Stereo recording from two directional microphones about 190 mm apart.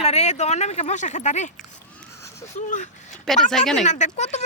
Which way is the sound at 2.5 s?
40° left (ahead or behind).